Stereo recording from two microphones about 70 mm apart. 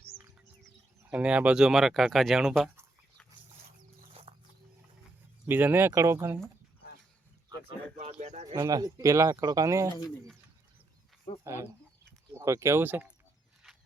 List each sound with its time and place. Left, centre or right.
1.1 s speech: centre
5.5 s speech: right
8.6 s speech: right
9.3 s speech: right
9.6 s speech: right
11.4 s speech: right
12.8 s speech: right